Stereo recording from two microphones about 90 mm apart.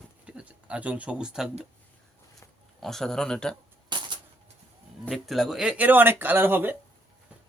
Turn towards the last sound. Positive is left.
turn(degrees=-20)  # may be behind; listen again after turning